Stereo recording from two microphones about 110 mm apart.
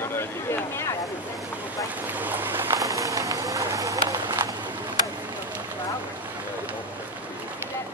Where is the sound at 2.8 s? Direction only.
30° right (ahead or behind).